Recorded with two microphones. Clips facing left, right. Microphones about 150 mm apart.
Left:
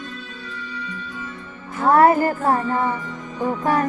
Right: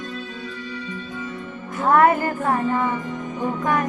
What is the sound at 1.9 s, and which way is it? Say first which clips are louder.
Music: left 2 dB; 35° left (ahead or behind).